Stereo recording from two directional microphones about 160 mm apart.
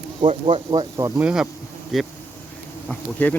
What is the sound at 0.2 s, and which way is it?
Speech, 35° right (ahead or behind).